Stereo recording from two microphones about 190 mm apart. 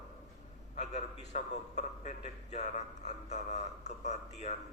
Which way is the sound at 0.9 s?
40° left (ahead or behind).